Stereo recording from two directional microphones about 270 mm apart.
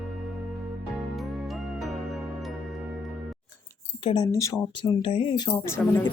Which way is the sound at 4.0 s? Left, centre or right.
Centre.